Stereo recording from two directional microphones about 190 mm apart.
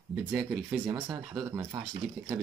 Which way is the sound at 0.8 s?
10° right (ahead or behind).